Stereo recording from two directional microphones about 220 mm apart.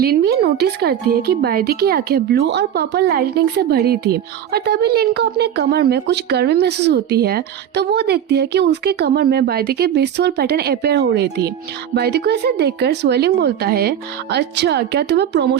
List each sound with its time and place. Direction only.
0.0 s speech: 45° right (ahead or behind)